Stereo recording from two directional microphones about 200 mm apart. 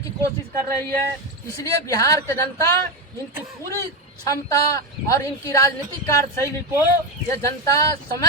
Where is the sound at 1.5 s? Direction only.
15° left (ahead or behind).